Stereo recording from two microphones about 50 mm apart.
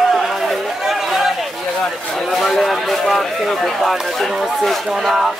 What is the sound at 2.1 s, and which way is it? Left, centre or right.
Speech, centre.